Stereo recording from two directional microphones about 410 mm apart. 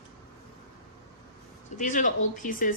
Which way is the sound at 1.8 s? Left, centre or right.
Centre.